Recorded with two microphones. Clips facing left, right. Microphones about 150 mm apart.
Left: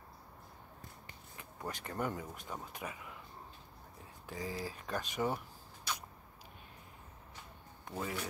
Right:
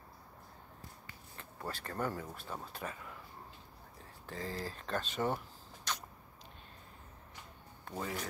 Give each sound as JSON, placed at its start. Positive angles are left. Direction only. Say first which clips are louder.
{"t": 1.3, "sound": "speech", "louder": "even", "side_deg": 15}
{"t": 4.3, "sound": "speech", "louder": "even", "side_deg": 10}
{"t": 5.9, "sound": "a sound", "louder": "right 1 dB", "side_deg": 10}
{"t": 7.9, "sound": "speech", "louder": "even", "side_deg": 15}